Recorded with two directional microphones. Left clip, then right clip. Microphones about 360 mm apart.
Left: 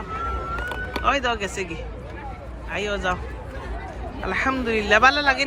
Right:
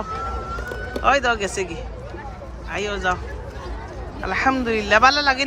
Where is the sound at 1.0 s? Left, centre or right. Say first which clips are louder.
Right 4 dB; centre.